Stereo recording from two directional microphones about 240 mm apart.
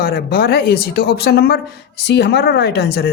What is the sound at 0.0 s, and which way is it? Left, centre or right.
Speech, left.